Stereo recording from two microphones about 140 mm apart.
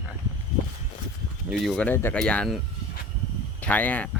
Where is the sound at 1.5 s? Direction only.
Centre (ahead or behind).